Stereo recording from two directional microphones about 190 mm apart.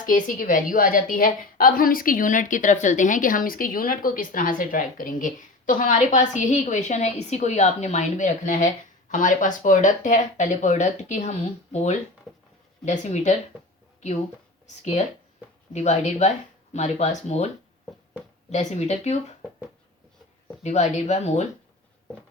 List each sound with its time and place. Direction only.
0.0 s a woman's voice: 45° left (ahead or behind)
14.8 s speech: 35° left (ahead or behind)
18.5 s speech: 35° left (ahead or behind)
20.6 s speech: 35° left (ahead or behind)